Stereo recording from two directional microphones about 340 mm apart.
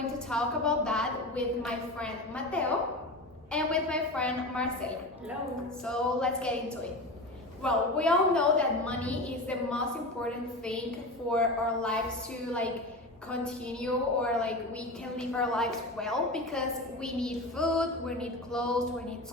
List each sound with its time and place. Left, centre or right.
0.3 s a woman's voice: centre
7.6 s a woman's voice: centre
11.3 s a woman's voice: centre
13.3 s a woman's voice: centre